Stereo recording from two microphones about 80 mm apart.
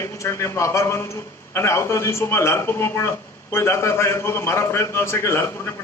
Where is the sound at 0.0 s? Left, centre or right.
Left.